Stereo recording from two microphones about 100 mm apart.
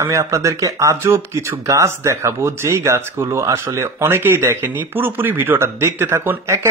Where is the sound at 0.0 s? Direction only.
30° right (ahead or behind).